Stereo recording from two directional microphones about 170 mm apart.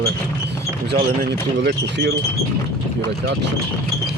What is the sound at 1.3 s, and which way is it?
Speech, 75° right (ahead or behind).